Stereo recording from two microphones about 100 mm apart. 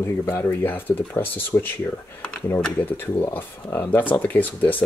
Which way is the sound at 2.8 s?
20° left (ahead or behind).